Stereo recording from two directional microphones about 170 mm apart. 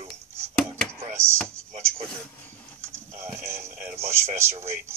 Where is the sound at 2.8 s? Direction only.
15° right (ahead or behind).